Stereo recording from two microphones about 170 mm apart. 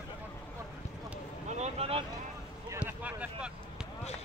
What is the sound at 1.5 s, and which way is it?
Vehicle, 40° right (ahead or behind).